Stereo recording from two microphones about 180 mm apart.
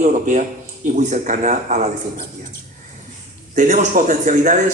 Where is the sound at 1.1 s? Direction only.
45° right (ahead or behind).